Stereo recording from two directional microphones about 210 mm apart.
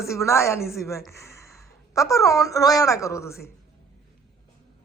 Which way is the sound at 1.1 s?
15° left (ahead or behind).